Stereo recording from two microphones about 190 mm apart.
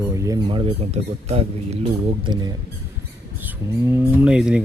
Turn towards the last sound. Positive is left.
turn(degrees=-5)  # may be behind; listen again after turning